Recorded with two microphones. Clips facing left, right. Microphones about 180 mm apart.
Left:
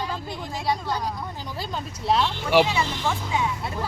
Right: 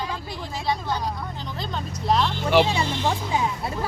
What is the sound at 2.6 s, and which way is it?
Speech, 30° right (ahead or behind).